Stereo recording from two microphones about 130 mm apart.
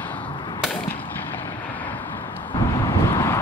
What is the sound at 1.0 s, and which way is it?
Vehicle, 15° left (ahead or behind).